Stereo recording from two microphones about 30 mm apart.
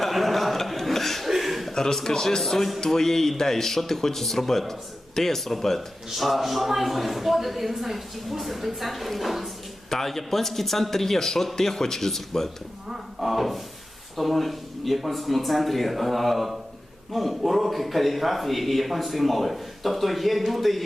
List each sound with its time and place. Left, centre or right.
0.0 s chuckle: centre
1.4 s a sound: centre
1.7 s speech: centre
2.4 s a man's voice: centre
9.9 s speech: centre
13.1 s a man's voice: centre